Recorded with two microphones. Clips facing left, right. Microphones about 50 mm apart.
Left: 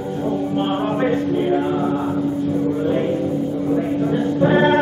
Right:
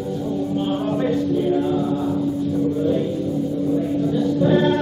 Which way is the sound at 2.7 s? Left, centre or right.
Left.